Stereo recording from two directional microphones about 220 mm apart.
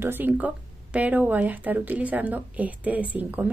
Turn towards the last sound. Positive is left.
turn(degrees=-5)  # may be behind; listen again after turning